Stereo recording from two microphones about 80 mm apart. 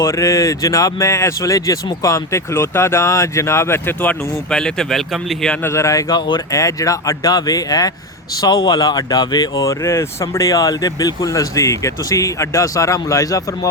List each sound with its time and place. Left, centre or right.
0.0 s speech: left
4.4 s speech: centre
5.6 s speech: left
6.1 s speech: left
6.5 s speech: left
9.6 s speech: left